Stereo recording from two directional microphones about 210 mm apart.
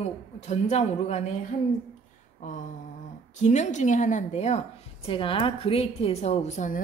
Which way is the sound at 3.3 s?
35° left (ahead or behind).